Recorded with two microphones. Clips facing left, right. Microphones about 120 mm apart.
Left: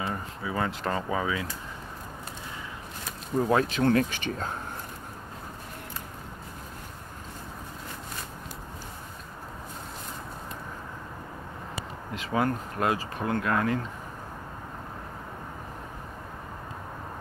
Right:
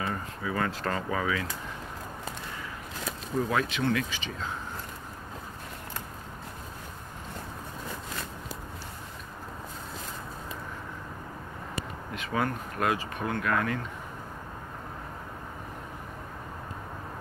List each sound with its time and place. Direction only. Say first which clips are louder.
0.0 s speech: even; 20° left (ahead or behind)
3.4 s speech: left 6 dB; 35° left (ahead or behind); by 4.5 s 50° left (ahead or behind)
12.1 s speech: left 3 dB; 25° left (ahead or behind)